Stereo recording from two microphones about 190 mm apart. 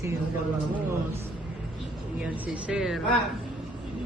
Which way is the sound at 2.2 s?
5° right (ahead or behind).